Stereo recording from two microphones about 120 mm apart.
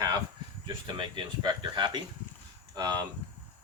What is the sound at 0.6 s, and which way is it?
Speech, 40° right (ahead or behind).